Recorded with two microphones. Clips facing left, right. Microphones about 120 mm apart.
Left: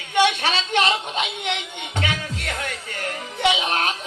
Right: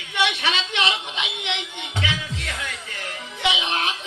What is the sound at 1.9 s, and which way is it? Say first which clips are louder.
Music: left 2 dB; 45° left (ahead or behind).